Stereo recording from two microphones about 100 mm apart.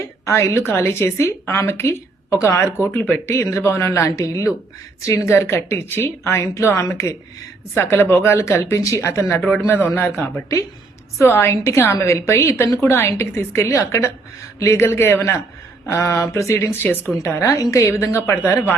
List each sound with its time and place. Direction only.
0.3 s a woman's voice: 30° left (ahead or behind)
11.2 s a woman's voice: 25° left (ahead or behind)